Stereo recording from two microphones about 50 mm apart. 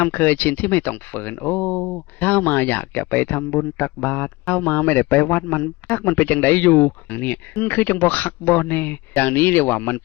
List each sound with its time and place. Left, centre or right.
0.0 s speech: left